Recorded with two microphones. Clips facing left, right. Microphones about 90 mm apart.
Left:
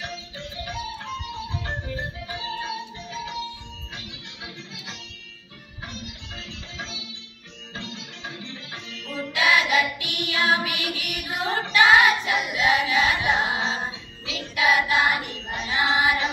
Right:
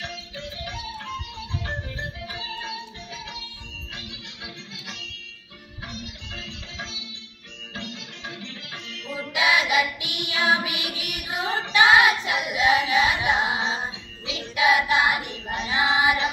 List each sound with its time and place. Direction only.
0.0 s music: 5° left (ahead or behind)
2.0 s music: 5° left (ahead or behind)
9.0 s child singing: 15° right (ahead or behind)
10.1 s female singing: 15° right (ahead or behind)
12.8 s music: 15° right (ahead or behind)
15.0 s child singing: 10° right (ahead or behind)